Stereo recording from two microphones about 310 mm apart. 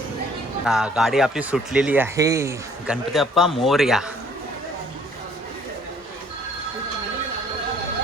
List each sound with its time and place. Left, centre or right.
0.6 s speech: centre